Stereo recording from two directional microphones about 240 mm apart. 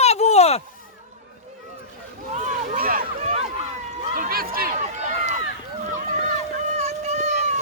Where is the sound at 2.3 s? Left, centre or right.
Right.